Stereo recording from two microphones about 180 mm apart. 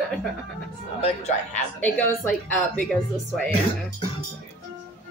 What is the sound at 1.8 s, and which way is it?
A man's voice, 10° left (ahead or behind).